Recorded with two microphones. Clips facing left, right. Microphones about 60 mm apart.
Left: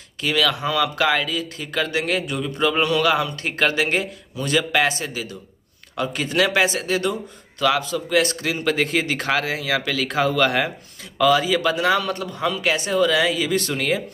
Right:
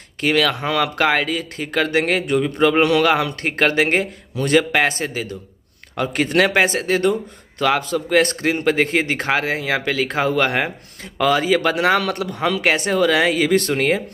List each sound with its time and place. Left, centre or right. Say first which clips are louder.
0.2 s speech: right 3 dB; right
3.4 s a man's voice: right 5 dB; right